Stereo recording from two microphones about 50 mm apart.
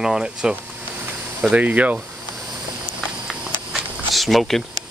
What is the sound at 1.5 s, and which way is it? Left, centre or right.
Speech, right.